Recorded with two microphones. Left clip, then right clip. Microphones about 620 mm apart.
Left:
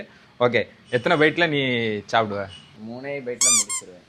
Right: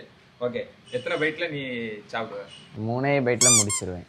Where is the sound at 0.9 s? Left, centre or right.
Left.